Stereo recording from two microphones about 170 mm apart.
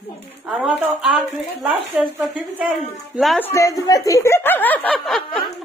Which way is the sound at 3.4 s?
15° left (ahead or behind).